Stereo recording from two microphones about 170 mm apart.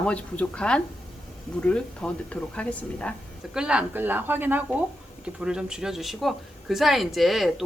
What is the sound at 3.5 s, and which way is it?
Speech, 5° right (ahead or behind).